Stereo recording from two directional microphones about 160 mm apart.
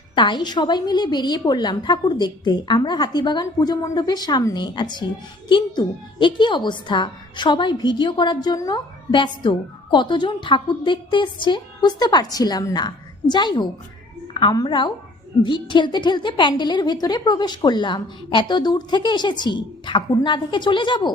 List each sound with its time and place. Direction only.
0.2 s a woman's voice: 30° left (ahead or behind)